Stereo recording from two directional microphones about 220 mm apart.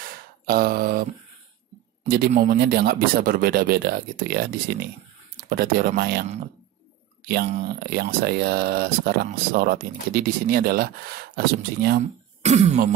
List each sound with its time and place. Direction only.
0.0 s a sound: 40° right (ahead or behind)
2.0 s speech: 40° right (ahead or behind)
7.6 s speech: 45° right (ahead or behind)
12.4 s speech: 30° right (ahead or behind)